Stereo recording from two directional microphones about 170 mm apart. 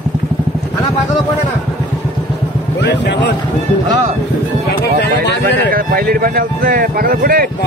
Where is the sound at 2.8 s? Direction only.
90° left.